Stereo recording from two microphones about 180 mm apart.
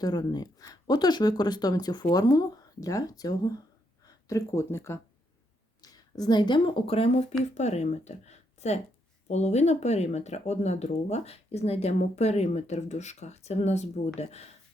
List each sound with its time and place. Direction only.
0.0 s speech: 20° left (ahead or behind)